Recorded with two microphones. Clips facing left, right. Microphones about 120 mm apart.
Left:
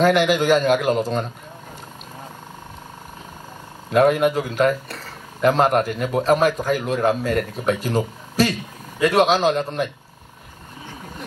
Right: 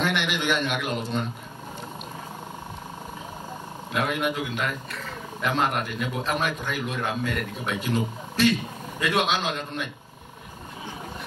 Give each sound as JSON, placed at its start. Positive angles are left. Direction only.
{"t": 0.0, "sound": "speech", "side_deg": 40}
{"t": 3.9, "sound": "speech", "side_deg": 40}